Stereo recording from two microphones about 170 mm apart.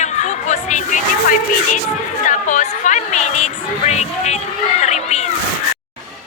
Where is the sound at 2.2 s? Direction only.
45° left (ahead or behind).